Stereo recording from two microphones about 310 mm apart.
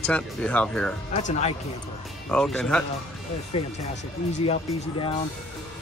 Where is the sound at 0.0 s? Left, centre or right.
Centre.